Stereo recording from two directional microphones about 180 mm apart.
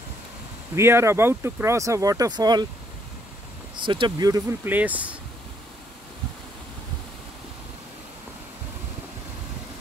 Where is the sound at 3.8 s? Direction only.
25° right (ahead or behind); by 5.2 s 10° right (ahead or behind).